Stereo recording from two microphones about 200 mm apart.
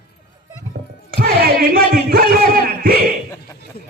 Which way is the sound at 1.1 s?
50° right (ahead or behind).